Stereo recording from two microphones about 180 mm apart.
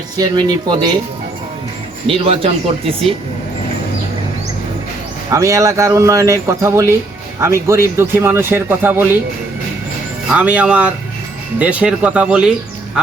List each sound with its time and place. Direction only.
0.2 s speech: 20° right (ahead or behind)
2.0 s speech: 30° right (ahead or behind)
5.3 s speech: 15° right (ahead or behind)
10.3 s speech: 5° right (ahead or behind)